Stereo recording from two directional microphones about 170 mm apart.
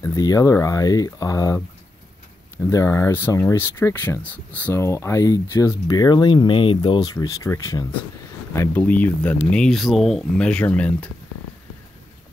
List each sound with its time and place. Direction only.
0.0 s speech: 20° left (ahead or behind)
2.6 s speech: 15° left (ahead or behind)